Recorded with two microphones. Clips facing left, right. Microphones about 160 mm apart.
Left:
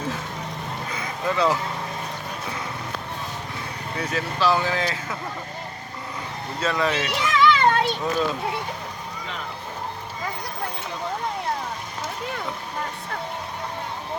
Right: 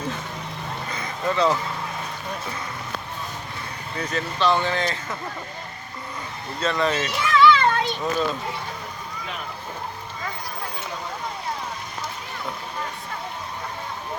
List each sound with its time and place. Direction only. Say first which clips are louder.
0.9 s a sound: right 1 dB; 5° left (ahead or behind)
3.9 s speech: even; 5° left (ahead or behind)
6.6 s speech: right 1 dB; 5° left (ahead or behind)
7.2 s children playing: right 2 dB; 20° left (ahead or behind)